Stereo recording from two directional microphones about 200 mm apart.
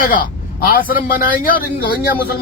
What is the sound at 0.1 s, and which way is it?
A man's voice, 45° left (ahead or behind).